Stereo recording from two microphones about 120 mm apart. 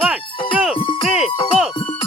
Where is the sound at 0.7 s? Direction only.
45° left (ahead or behind).